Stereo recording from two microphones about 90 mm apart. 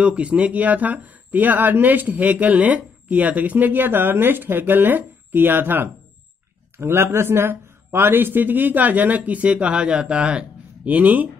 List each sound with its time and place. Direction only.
0.0 s speech: 15° right (ahead or behind)